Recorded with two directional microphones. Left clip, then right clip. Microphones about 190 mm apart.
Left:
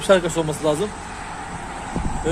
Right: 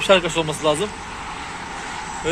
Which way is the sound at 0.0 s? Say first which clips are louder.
Right 1 dB; 15° left (ahead or behind).